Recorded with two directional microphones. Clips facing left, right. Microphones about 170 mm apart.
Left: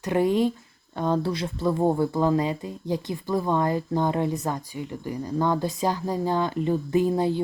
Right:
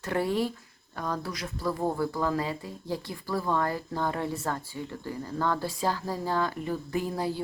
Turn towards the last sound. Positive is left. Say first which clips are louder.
# left 8 dB
turn(degrees=20)  # may be behind; listen again after turning